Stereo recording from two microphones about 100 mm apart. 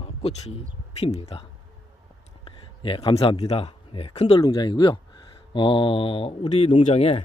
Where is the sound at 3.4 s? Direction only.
90° left.